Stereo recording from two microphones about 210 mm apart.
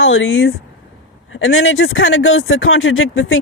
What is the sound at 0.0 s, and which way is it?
Speech, 70° left (ahead or behind).